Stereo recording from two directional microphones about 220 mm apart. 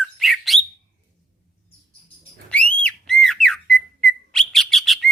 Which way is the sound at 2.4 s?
5° left (ahead or behind).